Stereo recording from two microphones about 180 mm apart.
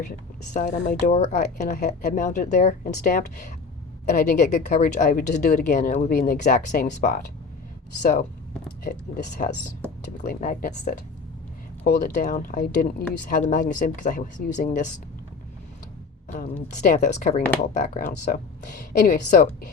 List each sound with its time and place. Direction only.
0.1 s speech: 50° left (ahead or behind)
5.6 s speech: 45° left (ahead or behind)
8.6 s a sound: 45° left (ahead or behind)
10.2 s speech: 45° left (ahead or behind)
16.8 s speech: 45° left (ahead or behind)